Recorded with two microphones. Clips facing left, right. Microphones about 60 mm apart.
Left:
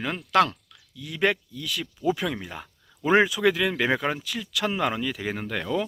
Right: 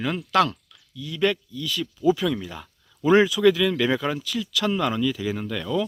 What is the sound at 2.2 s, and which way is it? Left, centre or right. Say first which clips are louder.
Speech: right 4 dB; left.